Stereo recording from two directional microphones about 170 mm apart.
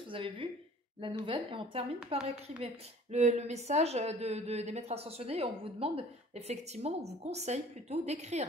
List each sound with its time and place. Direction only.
0.1 s a woman's voice: 30° right (ahead or behind)